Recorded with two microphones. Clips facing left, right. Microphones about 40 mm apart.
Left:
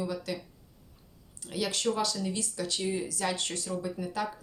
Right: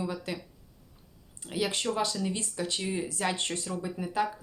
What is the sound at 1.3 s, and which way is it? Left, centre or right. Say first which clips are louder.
Speech: right 2 dB; centre.